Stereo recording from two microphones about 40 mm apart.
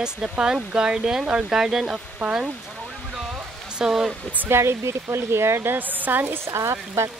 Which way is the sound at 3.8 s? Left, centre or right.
Centre.